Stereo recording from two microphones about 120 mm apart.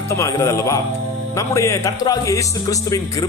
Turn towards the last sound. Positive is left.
turn(degrees=30)  # may be behind; listen again after turning